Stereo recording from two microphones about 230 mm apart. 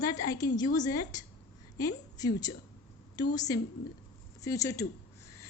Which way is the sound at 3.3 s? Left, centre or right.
Centre.